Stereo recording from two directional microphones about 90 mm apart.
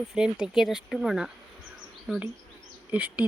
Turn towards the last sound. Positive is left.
turn(degrees=-15)  # may be behind; listen again after turning